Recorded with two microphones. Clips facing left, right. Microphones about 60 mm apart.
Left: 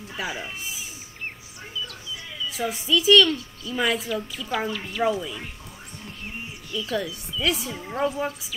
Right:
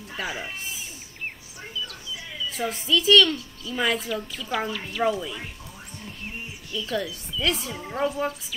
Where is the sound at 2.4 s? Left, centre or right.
Centre.